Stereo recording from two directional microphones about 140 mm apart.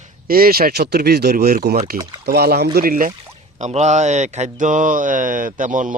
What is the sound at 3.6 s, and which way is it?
Speech, 55° right (ahead or behind).